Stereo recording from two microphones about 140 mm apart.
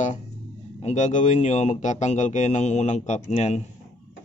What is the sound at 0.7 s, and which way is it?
Speech, 55° left (ahead or behind).